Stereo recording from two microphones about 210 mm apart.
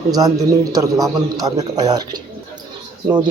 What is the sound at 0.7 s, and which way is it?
A man's voice, 15° right (ahead or behind).